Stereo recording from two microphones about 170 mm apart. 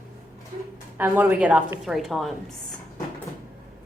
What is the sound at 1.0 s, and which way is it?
A woman's voice, 10° right (ahead or behind).